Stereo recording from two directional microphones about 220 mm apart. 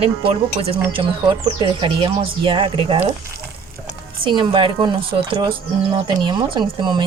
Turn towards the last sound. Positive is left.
turn(degrees=-20)  # may be behind; listen again after turning